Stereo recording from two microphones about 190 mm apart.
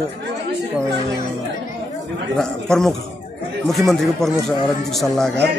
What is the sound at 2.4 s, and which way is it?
Speech, 5° left (ahead or behind).